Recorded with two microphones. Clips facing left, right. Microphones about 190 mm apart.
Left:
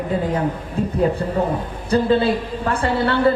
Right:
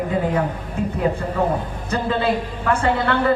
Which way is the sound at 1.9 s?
35° left (ahead or behind).